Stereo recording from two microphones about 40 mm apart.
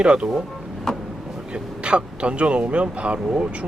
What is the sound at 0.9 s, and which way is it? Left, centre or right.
Vehicle, centre.